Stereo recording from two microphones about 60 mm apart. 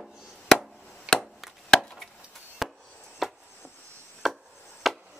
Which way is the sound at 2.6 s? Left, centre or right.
Centre.